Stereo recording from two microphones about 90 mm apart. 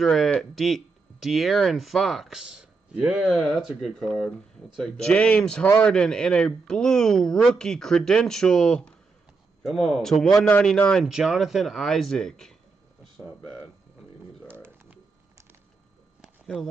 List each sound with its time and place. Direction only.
0.0 s speech: 5° left (ahead or behind)
5.0 s speech: 15° left (ahead or behind)
11.1 s speech: 5° right (ahead or behind)
14.5 s a sound: 25° right (ahead or behind)